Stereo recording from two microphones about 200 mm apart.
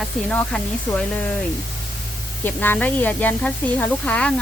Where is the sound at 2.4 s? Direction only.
10° left (ahead or behind).